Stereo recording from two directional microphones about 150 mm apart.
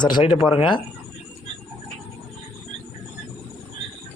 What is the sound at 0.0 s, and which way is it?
Speech, 30° left (ahead or behind).